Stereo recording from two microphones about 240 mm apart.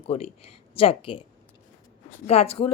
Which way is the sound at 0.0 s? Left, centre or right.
Left.